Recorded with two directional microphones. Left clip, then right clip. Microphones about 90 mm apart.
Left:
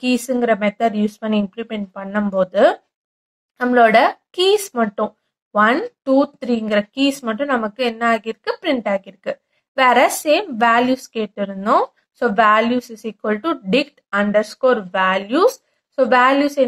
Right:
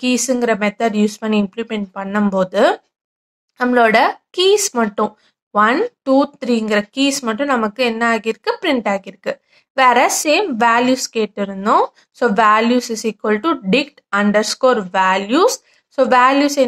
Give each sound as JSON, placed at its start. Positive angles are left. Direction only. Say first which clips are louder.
{"t": 0.0, "sound": "speech", "louder": "right 2 dB", "side_deg": -30}